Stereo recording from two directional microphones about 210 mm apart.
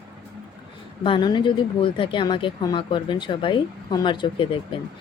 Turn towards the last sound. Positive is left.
turn(degrees=25)  # may be behind; listen again after turning